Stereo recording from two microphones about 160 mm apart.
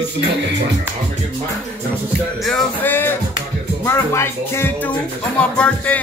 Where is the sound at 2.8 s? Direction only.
10° left (ahead or behind).